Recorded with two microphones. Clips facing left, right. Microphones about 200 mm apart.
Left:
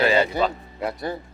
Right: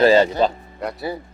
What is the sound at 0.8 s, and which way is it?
Speech, centre (ahead or behind).